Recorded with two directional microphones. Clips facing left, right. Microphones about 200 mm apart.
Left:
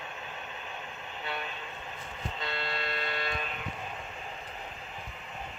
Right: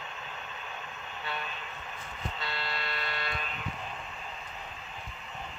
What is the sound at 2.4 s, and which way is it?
Vehicle, 50° left (ahead or behind).